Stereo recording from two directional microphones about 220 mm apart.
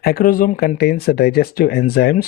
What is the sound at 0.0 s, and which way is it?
Speech, 40° left (ahead or behind).